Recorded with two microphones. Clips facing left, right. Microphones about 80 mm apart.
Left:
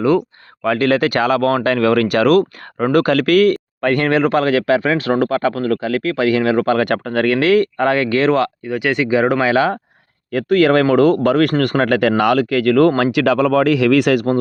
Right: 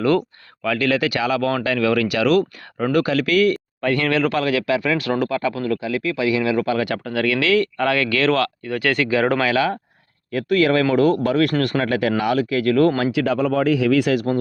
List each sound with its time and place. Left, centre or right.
0.0 s speech: centre
0.6 s speech: left
5.3 s speech: left
8.7 s speech: centre
9.4 s speech: left
10.3 s speech: left
13.0 s speech: left